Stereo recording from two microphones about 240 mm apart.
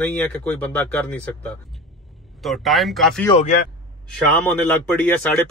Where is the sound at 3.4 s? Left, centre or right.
Left.